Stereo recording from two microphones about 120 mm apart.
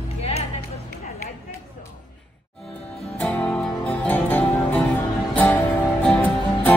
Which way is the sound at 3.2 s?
10° left (ahead or behind).